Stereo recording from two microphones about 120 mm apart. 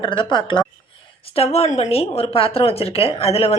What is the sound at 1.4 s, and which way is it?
A woman's voice, 60° left (ahead or behind).